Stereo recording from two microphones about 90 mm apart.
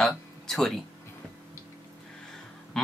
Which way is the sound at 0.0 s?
5° left (ahead or behind).